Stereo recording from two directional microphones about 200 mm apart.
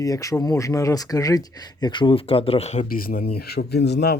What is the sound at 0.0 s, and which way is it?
Speech, 15° left (ahead or behind).